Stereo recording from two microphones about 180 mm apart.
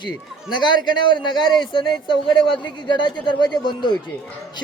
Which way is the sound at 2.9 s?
25° left (ahead or behind).